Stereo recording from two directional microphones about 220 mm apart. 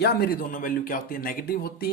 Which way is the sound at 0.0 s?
45° left (ahead or behind).